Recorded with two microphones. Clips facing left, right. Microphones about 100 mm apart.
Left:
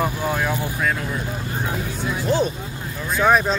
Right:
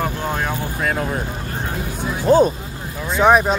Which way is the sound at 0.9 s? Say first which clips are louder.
Right 5 dB; 50° right (ahead or behind).